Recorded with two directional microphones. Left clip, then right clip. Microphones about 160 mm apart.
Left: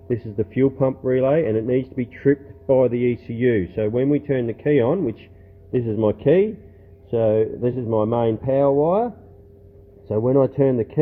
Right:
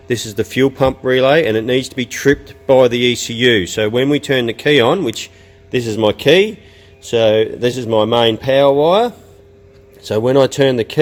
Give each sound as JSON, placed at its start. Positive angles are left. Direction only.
{"t": 0.1, "sound": "speech", "side_deg": -35}
{"t": 5.7, "sound": "speech", "side_deg": -20}
{"t": 10.2, "sound": "speech", "side_deg": -40}
{"t": 10.4, "sound": "speech", "side_deg": -25}